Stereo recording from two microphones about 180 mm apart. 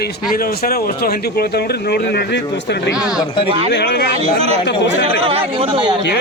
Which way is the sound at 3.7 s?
70° left (ahead or behind).